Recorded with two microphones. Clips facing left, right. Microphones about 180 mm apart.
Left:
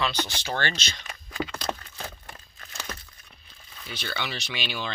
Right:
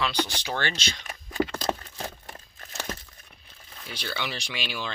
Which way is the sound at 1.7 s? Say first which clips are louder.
Right 3 dB; 10° right (ahead or behind).